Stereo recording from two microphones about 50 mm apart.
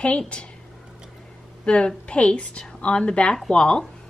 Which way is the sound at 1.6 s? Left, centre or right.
Left.